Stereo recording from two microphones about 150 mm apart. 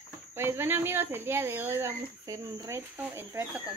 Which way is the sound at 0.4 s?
15° right (ahead or behind).